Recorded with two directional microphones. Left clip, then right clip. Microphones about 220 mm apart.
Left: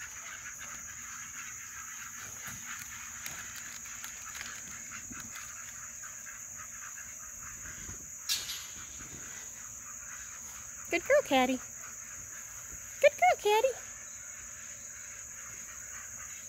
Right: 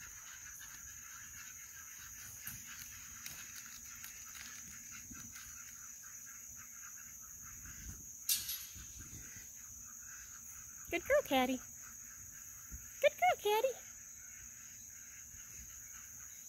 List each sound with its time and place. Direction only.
8.3 s cricket: 30° right (ahead or behind)
10.9 s speech: centre (ahead or behind)
13.0 s a sound: 5° left (ahead or behind)